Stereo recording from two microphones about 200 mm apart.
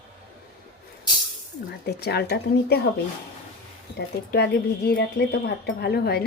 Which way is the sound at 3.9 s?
55° left (ahead or behind).